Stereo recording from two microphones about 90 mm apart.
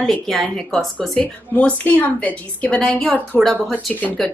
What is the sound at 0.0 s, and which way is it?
Speech, centre (ahead or behind).